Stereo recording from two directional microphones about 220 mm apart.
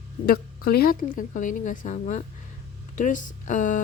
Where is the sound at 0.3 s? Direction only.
45° left (ahead or behind).